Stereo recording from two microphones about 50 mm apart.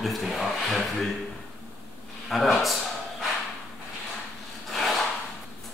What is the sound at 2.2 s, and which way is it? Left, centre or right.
Speech, centre.